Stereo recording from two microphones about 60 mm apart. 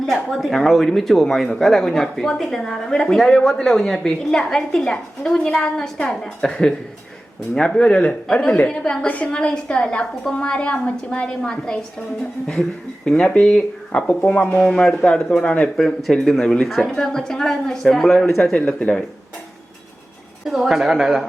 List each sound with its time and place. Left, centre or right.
0.0 s speech: centre
9.0 s speech: left
9.3 s speech: centre
13.1 s speech: centre
14.6 s speech: centre
16.2 s speech: centre
18.6 s speech: left
20.5 s speech: centre